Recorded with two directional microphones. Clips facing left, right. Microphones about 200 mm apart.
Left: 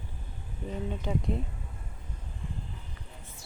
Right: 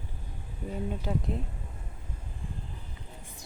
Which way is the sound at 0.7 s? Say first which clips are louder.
Even; 5° right (ahead or behind).